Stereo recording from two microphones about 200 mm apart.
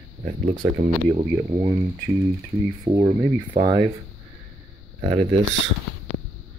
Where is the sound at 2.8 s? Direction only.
25° right (ahead or behind).